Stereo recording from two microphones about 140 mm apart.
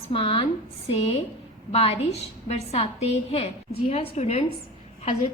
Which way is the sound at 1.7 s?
45° left (ahead or behind).